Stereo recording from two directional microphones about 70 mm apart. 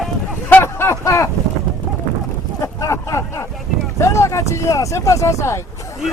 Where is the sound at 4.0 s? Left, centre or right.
Left.